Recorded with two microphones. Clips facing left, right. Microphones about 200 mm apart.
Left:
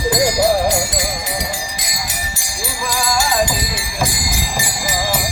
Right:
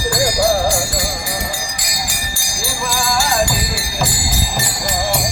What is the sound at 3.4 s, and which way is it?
Jingle bell, 20° left (ahead or behind).